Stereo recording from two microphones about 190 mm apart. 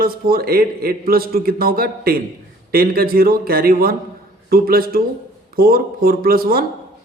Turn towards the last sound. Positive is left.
turn(degrees=-50)  # may be behind; listen again after turning